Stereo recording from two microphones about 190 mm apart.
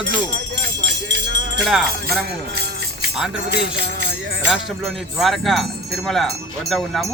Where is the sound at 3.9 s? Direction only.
60° right (ahead or behind).